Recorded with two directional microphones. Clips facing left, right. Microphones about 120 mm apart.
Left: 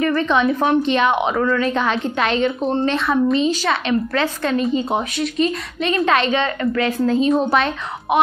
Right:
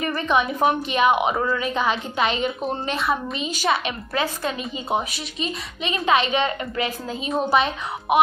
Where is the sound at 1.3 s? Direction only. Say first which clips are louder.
Left 5 dB; 25° right (ahead or behind).